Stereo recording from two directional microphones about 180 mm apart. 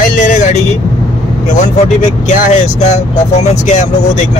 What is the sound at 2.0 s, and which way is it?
Speech, 45° left (ahead or behind).